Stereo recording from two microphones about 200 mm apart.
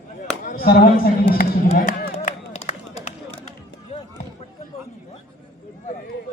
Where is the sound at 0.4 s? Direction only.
45° left (ahead or behind).